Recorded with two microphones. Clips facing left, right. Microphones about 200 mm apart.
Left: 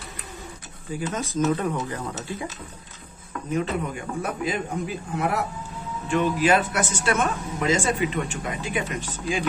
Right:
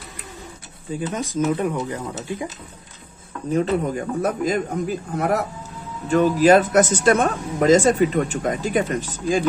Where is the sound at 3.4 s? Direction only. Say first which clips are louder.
Right 6 dB; 35° right (ahead or behind).